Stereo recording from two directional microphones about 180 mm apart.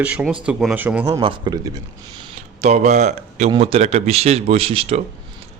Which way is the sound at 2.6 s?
40° right (ahead or behind).